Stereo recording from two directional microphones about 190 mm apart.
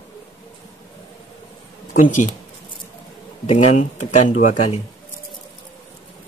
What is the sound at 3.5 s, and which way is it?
Speech, 35° left (ahead or behind).